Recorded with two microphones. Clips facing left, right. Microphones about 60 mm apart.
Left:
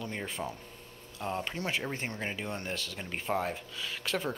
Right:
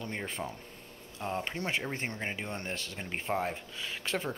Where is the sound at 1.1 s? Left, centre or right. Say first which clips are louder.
Even; right.